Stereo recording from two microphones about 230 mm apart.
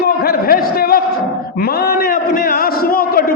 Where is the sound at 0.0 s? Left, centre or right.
Left.